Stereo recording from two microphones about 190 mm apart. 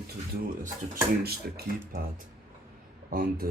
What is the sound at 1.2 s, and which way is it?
Speech, 50° right (ahead or behind).